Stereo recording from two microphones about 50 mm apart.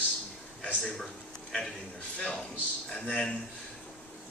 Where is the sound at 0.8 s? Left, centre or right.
Centre.